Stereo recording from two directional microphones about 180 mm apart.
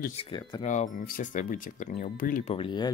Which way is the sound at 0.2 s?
25° left (ahead or behind).